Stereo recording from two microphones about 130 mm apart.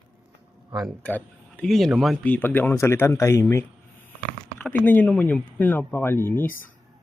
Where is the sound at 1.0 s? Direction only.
10° left (ahead or behind).